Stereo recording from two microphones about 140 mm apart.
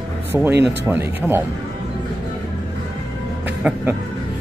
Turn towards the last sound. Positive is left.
turn(degrees=-10)  # may be behind; listen again after turning